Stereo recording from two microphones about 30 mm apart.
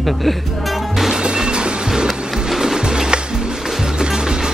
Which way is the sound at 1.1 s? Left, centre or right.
Right.